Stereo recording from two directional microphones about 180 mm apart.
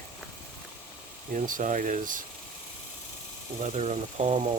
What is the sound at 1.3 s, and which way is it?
Speech, 45° right (ahead or behind).